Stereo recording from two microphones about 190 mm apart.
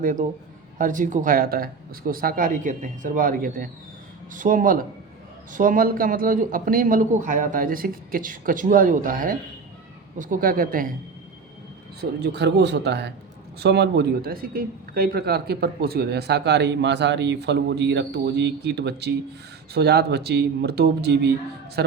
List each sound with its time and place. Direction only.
0.0 s a man's voice: 45° right (ahead or behind)
11.9 s a man's voice: 60° right (ahead or behind)